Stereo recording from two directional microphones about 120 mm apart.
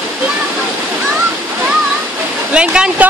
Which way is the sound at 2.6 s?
10° right (ahead or behind).